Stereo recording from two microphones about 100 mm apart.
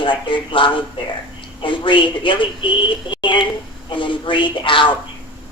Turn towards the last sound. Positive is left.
turn(degrees=55)  # may be behind; listen again after turning